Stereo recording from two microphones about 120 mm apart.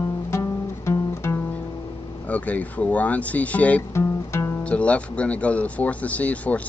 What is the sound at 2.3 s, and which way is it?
Speech, 15° left (ahead or behind).